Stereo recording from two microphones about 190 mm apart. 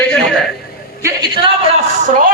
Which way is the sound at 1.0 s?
25° right (ahead or behind).